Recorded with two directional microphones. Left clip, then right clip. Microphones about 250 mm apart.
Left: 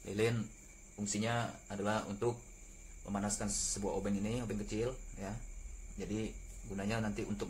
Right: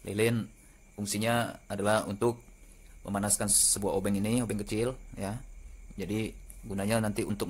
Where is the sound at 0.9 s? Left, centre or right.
Right.